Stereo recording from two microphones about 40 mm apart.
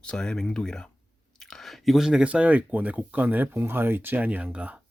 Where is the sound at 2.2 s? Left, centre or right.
Right.